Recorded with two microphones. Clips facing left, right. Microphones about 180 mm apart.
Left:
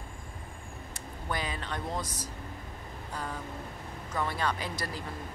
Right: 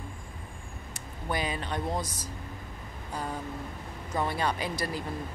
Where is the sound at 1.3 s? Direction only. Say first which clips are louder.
Right 4 dB; 15° right (ahead or behind).